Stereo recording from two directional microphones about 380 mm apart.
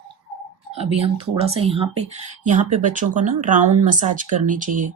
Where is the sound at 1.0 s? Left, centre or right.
Centre.